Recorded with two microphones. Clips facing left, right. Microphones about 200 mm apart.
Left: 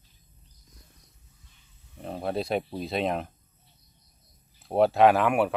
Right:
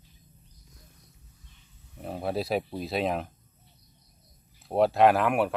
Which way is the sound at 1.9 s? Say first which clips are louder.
Even; 5° right (ahead or behind).